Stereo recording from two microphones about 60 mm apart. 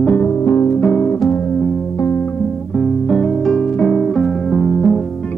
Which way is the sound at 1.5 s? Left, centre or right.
Centre.